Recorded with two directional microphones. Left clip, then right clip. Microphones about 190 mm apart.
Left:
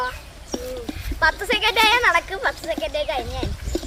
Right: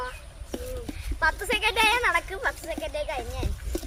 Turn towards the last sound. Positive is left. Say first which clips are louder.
# left 7 dB
turn(degrees=-15)  # may be behind; listen again after turning